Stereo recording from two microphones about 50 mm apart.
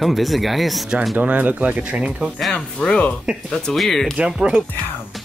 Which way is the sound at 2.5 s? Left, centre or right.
Centre.